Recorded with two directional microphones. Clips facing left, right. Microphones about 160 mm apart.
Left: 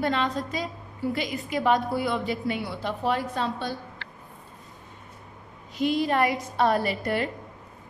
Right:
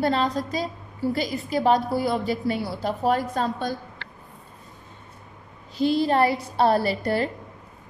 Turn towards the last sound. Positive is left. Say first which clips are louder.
# right 3 dB
turn(degrees=-35)  # may be behind; listen again after turning